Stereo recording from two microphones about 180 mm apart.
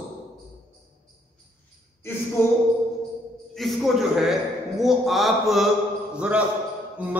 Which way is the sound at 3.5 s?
Centre (ahead or behind).